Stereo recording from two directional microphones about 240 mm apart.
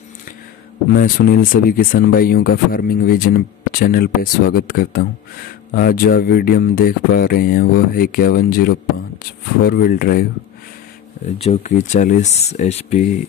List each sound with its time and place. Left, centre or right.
0.9 s speech: left
11.4 s speech: left